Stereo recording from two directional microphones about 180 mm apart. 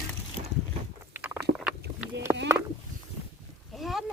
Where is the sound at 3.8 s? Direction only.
Centre (ahead or behind).